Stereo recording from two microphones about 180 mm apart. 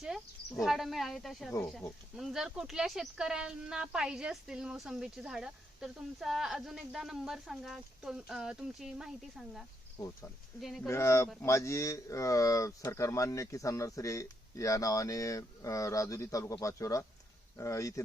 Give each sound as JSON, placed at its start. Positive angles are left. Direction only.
{"t": 0.0, "sound": "speech", "side_deg": 0}
{"t": 10.6, "sound": "speech", "side_deg": 0}
{"t": 10.8, "sound": "speech", "side_deg": 15}